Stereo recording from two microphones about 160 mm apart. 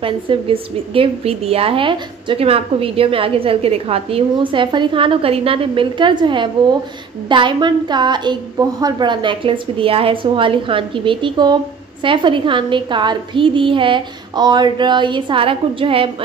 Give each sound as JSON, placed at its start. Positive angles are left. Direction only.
{"t": 0.0, "sound": "a woman's voice", "side_deg": -35}